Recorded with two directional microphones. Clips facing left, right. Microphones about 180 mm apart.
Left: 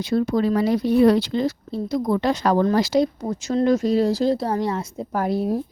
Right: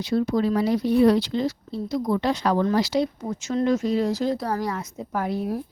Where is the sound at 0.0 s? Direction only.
50° left (ahead or behind).